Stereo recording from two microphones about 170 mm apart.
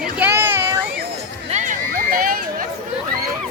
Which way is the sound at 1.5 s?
50° right (ahead or behind).